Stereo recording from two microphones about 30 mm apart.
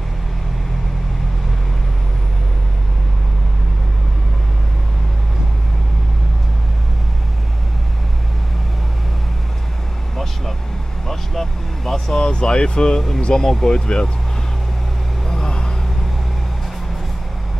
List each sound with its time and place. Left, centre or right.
11.1 s vehicle: centre
12.2 s speech: left
15.4 s vehicle: left